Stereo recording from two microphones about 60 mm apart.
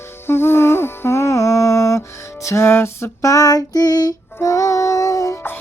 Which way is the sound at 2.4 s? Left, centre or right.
Left.